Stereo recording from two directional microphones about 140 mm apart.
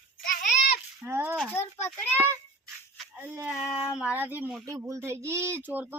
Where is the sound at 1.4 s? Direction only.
15° left (ahead or behind).